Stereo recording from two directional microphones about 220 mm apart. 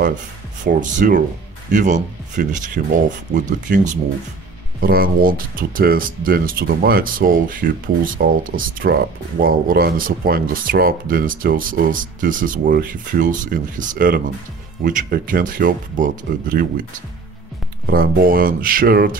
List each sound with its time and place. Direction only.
0.7 s speech: 35° right (ahead or behind)
17.8 s speech: 40° right (ahead or behind)